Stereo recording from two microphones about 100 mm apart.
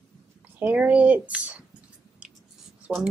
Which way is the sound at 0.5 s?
15° right (ahead or behind).